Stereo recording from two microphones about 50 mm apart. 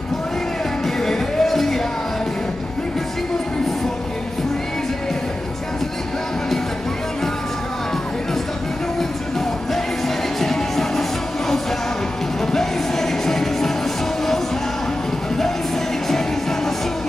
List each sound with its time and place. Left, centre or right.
0.8 s music: centre
10.0 s music: centre